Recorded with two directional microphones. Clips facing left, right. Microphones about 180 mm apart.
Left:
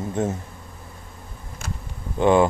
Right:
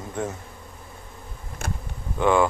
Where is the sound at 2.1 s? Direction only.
25° left (ahead or behind).